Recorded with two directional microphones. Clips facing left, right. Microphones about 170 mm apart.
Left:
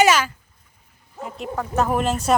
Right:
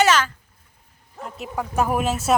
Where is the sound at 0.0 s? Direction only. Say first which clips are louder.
Left 1 dB; 10° left (ahead or behind).